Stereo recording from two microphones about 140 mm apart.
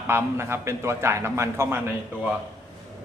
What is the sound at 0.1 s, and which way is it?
A man's voice, 15° right (ahead or behind).